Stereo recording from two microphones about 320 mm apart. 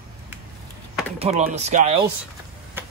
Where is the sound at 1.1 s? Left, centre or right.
Centre.